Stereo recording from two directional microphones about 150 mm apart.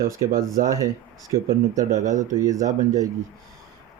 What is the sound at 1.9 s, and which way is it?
Speech, 55° right (ahead or behind).